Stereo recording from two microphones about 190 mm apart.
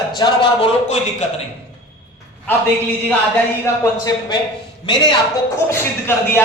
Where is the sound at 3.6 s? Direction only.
15° left (ahead or behind).